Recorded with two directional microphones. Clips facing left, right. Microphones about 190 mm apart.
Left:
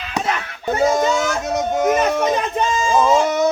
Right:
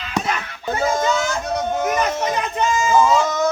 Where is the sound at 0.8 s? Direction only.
20° left (ahead or behind).